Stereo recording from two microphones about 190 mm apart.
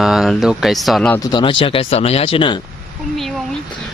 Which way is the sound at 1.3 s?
25° left (ahead or behind).